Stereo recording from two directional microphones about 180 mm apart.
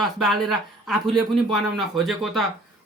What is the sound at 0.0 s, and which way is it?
Speech, centre (ahead or behind).